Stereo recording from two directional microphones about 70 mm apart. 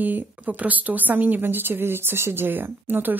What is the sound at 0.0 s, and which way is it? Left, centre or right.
A woman's voice, right.